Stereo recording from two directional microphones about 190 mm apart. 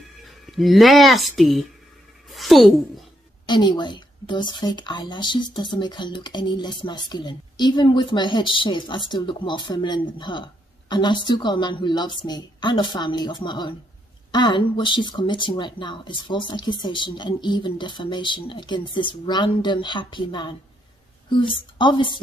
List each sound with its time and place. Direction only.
0.5 s speech: centre (ahead or behind)
2.3 s a sound: centre (ahead or behind)
3.4 s speech: 25° left (ahead or behind)